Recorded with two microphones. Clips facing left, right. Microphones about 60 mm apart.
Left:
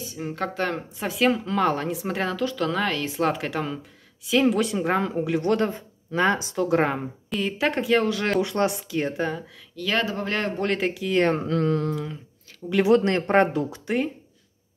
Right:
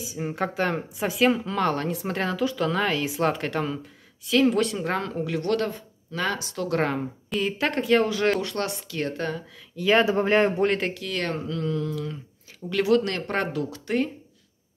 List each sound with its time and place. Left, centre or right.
0.0 s speech: centre
7.2 s speech: centre
8.4 s speech: centre
9.8 s speech: centre
10.6 s speech: centre
11.0 s speech: left
11.4 s a sound: left
12.8 s speech: left